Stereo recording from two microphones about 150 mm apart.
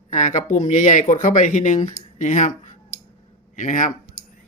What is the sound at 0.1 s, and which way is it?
Speech, 55° left (ahead or behind).